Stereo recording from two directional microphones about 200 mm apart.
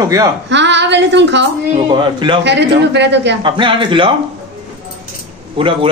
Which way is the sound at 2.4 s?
60° right (ahead or behind).